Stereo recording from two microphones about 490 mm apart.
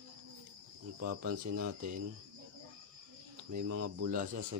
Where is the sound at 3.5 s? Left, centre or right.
Right; by 4.4 s centre.